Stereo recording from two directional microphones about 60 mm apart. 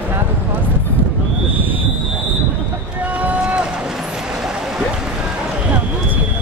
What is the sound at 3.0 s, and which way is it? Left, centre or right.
Run, right.